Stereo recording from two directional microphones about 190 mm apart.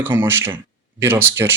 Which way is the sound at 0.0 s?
10° right (ahead or behind).